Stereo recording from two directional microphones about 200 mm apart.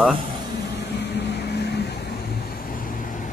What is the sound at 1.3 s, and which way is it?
Vehicle, 55° left (ahead or behind).